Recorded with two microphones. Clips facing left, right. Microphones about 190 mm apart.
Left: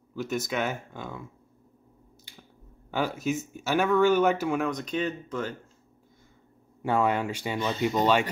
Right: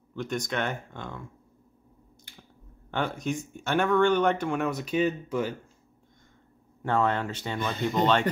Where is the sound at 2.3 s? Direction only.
55° right (ahead or behind).